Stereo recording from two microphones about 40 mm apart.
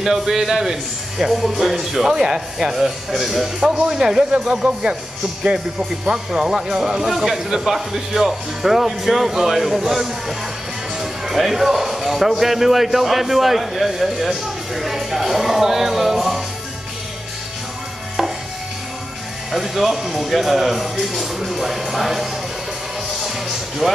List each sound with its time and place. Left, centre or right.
0.0 s speech: centre
2.7 s speech: centre
3.7 s speech: centre
5.4 s speech: right
7.1 s speech: centre
19.5 s speech: centre
23.2 s music: centre